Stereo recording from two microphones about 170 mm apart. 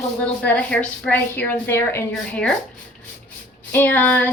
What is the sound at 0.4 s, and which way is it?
A woman's voice, 5° left (ahead or behind).